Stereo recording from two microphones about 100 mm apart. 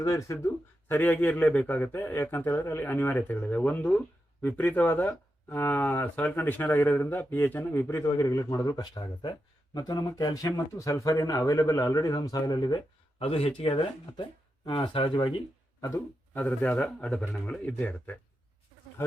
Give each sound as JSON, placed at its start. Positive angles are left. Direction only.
{"t": 0.0, "sound": "speech", "side_deg": 30}
{"t": 0.9, "sound": "speech", "side_deg": 20}
{"t": 13.1, "sound": "speech", "side_deg": 75}
{"t": 14.6, "sound": "speech", "side_deg": 55}
{"t": 16.3, "sound": "speech", "side_deg": 15}